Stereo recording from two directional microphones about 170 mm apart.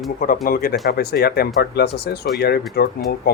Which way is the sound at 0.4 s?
60° left (ahead or behind).